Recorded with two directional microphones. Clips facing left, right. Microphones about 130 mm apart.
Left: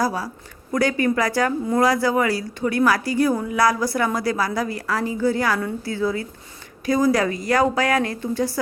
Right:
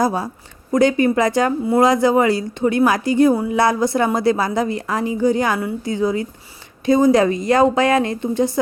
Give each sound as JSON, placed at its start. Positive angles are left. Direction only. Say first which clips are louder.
{"t": 0.0, "sound": "a woman's voice", "louder": "right 4 dB", "side_deg": -25}